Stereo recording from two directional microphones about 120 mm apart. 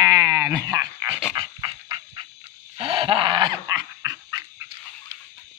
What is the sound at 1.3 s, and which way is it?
Dog, 40° right (ahead or behind).